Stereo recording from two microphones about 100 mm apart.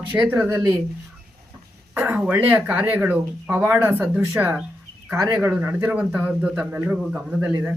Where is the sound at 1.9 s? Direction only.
25° right (ahead or behind).